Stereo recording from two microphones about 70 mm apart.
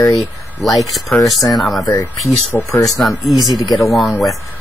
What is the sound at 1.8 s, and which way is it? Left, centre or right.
Speech, left.